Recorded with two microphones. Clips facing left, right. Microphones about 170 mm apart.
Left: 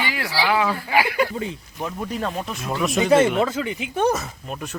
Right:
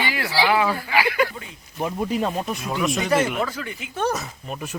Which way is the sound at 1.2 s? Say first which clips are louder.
Left 1 dB; 30° left (ahead or behind).